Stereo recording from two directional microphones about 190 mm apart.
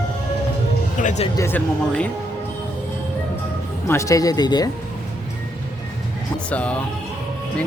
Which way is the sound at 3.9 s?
15° left (ahead or behind).